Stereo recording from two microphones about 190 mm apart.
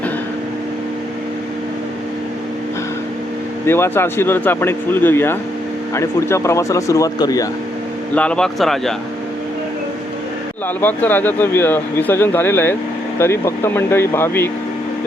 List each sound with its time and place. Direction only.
3.7 s speech: 10° left (ahead or behind)
8.1 s speech: 5° left (ahead or behind)
10.8 s speech: 10° left (ahead or behind)